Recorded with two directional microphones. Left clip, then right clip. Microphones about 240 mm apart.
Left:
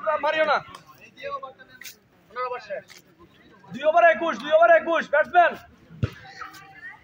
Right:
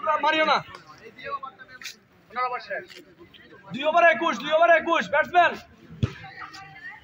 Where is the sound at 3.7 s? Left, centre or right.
Right.